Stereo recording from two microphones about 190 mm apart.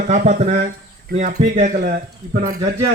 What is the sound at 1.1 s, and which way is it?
Speech, 55° right (ahead or behind).